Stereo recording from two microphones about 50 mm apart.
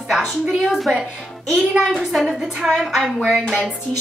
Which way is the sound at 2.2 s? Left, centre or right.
Centre.